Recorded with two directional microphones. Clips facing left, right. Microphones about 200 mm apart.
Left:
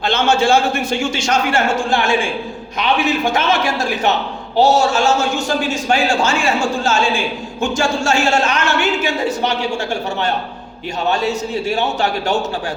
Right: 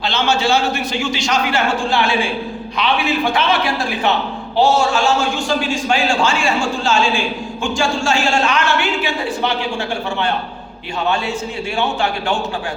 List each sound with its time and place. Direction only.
0.0 s a man's voice: 50° left (ahead or behind)
11.1 s a man's voice: 40° left (ahead or behind)